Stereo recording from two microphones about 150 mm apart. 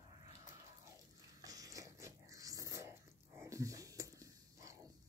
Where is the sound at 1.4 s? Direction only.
25° right (ahead or behind).